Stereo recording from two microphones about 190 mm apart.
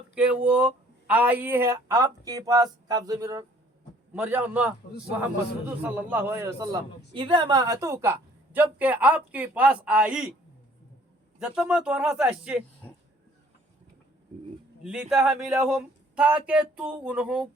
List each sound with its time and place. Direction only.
0.1 s a man's voice: 5° right (ahead or behind)
11.3 s speech: 5° right (ahead or behind)
14.8 s speech: 5° right (ahead or behind)